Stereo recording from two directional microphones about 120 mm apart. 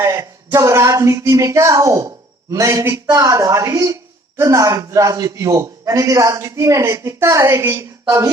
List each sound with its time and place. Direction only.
0.0 s speech: 25° right (ahead or behind)